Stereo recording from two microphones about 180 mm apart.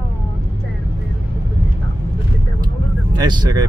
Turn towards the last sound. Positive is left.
turn(degrees=-20)  # may be behind; listen again after turning